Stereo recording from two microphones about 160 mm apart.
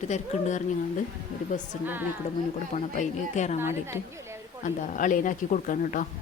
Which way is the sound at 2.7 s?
45° left (ahead or behind).